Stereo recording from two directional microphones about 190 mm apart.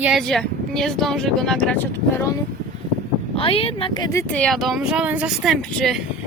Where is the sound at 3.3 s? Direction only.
30° left (ahead or behind); by 6.0 s centre (ahead or behind).